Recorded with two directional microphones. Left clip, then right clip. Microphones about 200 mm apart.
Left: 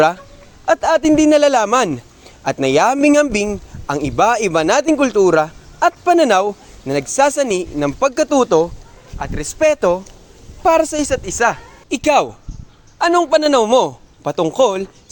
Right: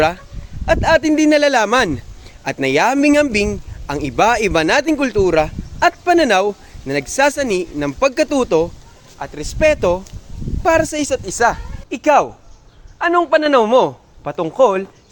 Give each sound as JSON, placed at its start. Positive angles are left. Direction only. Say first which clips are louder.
{"t": 0.6, "sound": "a man's voice", "louder": "even", "side_deg": 5}
{"t": 9.1, "sound": "a man's voice", "louder": "left 2 dB", "side_deg": 20}
{"t": 11.9, "sound": "a man's voice", "louder": "right 1 dB", "side_deg": 25}